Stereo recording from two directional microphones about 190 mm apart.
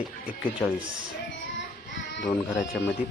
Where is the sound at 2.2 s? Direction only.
15° left (ahead or behind).